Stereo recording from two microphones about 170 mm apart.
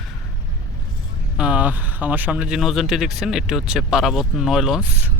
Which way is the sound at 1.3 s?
5° right (ahead or behind).